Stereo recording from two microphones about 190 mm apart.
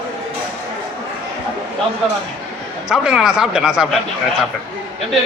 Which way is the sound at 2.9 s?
5° right (ahead or behind).